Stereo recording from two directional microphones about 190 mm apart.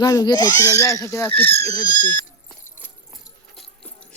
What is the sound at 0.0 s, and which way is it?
Speech, 20° left (ahead or behind).